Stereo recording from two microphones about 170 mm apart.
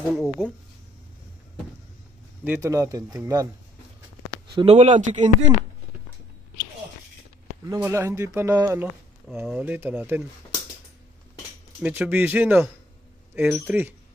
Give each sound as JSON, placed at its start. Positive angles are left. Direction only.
{"t": 0.1, "sound": "speech", "side_deg": -5}
{"t": 2.4, "sound": "speech", "side_deg": -15}
{"t": 4.6, "sound": "speech", "side_deg": -35}
{"t": 7.6, "sound": "speech", "side_deg": -15}
{"t": 11.8, "sound": "speech", "side_deg": -10}